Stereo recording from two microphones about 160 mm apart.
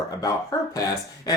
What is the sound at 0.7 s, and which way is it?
Speech, 20° left (ahead or behind).